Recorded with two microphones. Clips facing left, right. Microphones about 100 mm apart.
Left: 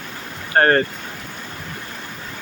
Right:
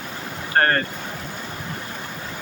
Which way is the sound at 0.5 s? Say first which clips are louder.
Left 4 dB; 30° left (ahead or behind).